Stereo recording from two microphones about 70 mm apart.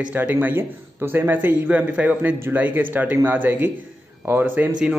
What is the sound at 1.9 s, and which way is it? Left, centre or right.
Speech, centre.